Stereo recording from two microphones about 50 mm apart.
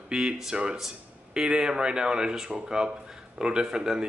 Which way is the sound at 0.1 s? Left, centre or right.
Centre.